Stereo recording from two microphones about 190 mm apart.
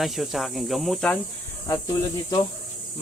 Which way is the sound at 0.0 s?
Centre (ahead or behind).